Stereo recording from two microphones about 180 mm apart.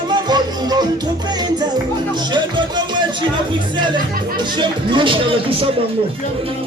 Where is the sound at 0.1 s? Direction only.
25° right (ahead or behind).